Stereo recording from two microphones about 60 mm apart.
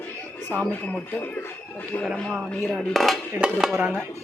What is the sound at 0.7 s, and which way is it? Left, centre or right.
Speech, left.